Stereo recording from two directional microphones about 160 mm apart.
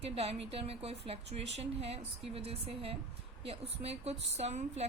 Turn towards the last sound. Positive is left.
turn(degrees=-45)  # may be behind; listen again after turning